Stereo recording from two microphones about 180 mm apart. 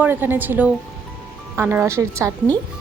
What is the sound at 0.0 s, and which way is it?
A woman's voice, 10° right (ahead or behind).